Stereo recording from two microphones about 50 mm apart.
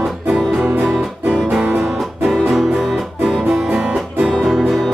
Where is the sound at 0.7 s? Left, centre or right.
Right.